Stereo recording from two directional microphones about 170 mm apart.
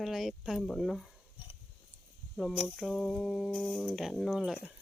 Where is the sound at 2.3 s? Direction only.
Centre (ahead or behind).